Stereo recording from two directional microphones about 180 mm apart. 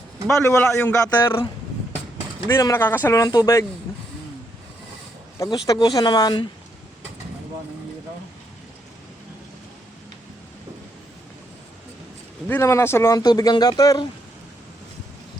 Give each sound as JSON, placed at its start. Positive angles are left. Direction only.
{"t": 0.3, "sound": "speech", "side_deg": 15}
{"t": 2.5, "sound": "speech", "side_deg": 15}
{"t": 5.4, "sound": "speech", "side_deg": 20}
{"t": 12.5, "sound": "speech", "side_deg": 15}